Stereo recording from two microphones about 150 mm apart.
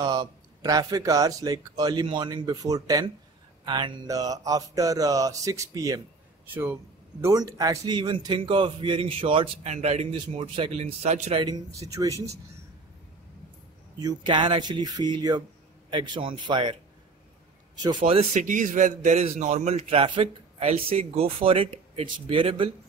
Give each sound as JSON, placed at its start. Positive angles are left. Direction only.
{"t": 0.0, "sound": "a man's voice", "side_deg": -25}
{"t": 9.7, "sound": "a man's voice", "side_deg": -45}
{"t": 10.1, "sound": "a man's voice", "side_deg": -35}
{"t": 11.4, "sound": "speech", "side_deg": -25}
{"t": 13.9, "sound": "a man's voice", "side_deg": -30}
{"t": 17.8, "sound": "a man's voice", "side_deg": -35}
{"t": 18.4, "sound": "a man's voice", "side_deg": -60}